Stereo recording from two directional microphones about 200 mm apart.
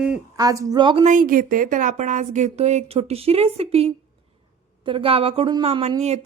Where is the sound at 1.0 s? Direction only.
40° right (ahead or behind).